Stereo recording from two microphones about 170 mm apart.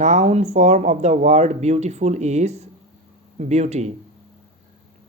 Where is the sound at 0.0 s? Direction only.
40° right (ahead or behind).